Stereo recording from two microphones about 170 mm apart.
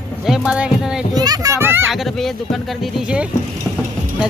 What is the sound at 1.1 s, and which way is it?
Speech, 20° right (ahead or behind).